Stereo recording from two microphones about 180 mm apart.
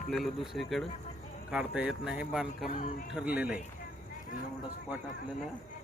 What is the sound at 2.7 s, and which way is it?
Speech, 45° left (ahead or behind).